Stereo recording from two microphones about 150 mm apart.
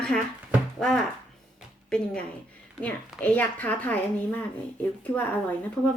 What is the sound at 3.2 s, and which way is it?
Speech, 10° left (ahead or behind).